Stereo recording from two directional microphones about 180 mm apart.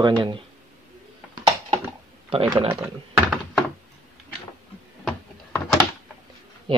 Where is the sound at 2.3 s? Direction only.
25° right (ahead or behind).